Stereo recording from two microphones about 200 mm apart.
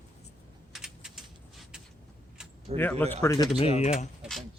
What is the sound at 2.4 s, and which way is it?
Keys jangling, 5° right (ahead or behind).